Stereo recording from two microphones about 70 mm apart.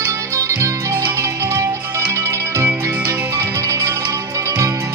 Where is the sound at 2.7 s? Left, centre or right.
Right.